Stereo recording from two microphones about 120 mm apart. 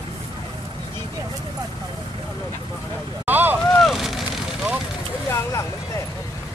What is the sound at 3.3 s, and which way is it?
Vehicle, 15° right (ahead or behind).